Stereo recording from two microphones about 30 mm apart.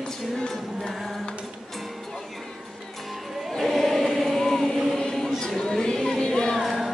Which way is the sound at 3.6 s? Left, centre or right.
Centre.